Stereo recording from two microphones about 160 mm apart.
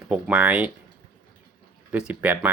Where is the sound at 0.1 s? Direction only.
10° right (ahead or behind).